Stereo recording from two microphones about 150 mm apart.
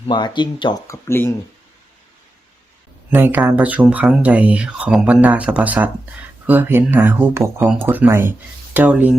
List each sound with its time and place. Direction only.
0.1 s speech: 30° left (ahead or behind)
0.9 s speech: 15° left (ahead or behind)
3.1 s speech: 15° right (ahead or behind)